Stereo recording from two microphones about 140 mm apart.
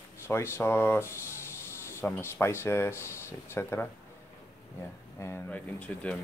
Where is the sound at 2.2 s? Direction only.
15° left (ahead or behind).